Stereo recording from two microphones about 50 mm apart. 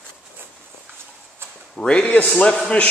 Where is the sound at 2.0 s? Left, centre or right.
Left.